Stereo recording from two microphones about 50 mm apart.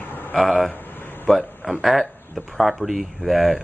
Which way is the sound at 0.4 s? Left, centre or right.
Centre.